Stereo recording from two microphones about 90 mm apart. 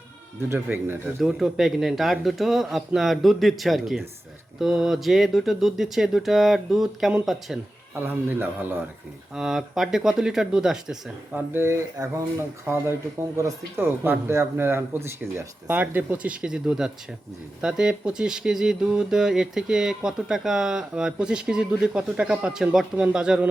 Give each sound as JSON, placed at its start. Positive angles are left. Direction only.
{"t": 0.4, "sound": "speech", "side_deg": -25}
{"t": 1.2, "sound": "speech", "side_deg": -5}
{"t": 8.0, "sound": "speech", "side_deg": -25}
{"t": 9.3, "sound": "speech", "side_deg": -5}
{"t": 11.5, "sound": "speech", "side_deg": -30}
{"t": 13.3, "sound": "speech", "side_deg": -40}
{"t": 14.0, "sound": "speech", "side_deg": -25}